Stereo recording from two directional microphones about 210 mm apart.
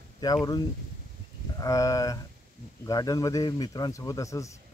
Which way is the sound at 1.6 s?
15° left (ahead or behind).